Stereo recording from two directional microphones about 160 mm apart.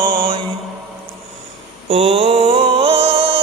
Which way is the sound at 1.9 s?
40° right (ahead or behind).